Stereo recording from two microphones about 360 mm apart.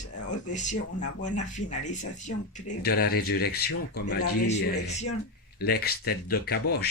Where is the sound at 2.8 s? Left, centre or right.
Left.